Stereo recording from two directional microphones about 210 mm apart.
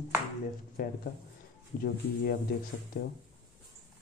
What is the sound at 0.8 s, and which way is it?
Speech, 45° left (ahead or behind).